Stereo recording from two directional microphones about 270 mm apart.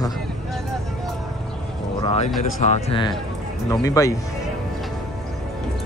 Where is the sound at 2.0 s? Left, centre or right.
Left.